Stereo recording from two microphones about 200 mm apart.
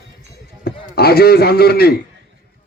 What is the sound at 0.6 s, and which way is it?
A man's voice, 50° left (ahead or behind).